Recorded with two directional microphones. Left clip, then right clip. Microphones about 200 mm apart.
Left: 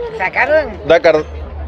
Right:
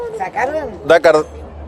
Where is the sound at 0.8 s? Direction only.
5° right (ahead or behind).